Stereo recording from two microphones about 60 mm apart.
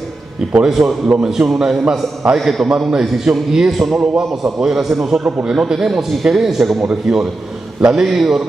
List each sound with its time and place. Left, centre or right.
0.7 s a man's voice: centre
3.7 s a man's voice: centre
4.0 s a man's voice: centre
4.4 s a man's voice: centre